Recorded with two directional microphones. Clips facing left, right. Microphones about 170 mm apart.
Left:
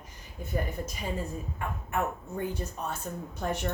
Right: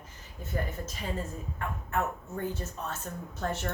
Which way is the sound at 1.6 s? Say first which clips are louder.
Even; 15° left (ahead or behind).